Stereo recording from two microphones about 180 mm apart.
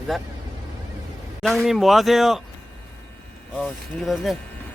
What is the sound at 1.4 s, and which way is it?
Speech, centre (ahead or behind).